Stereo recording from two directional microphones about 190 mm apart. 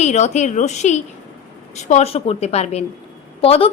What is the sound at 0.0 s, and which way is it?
A woman's voice, 35° left (ahead or behind).